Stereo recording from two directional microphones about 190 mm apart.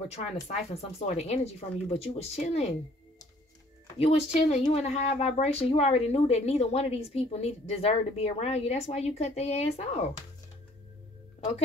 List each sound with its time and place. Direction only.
0.1 s a woman's voice: 35° left (ahead or behind)
4.0 s a woman's voice: 35° left (ahead or behind)